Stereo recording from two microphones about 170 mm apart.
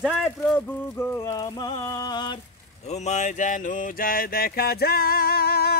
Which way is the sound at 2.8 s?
40° left (ahead or behind).